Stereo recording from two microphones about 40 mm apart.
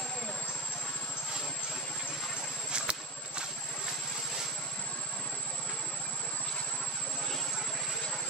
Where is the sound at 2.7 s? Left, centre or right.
Right.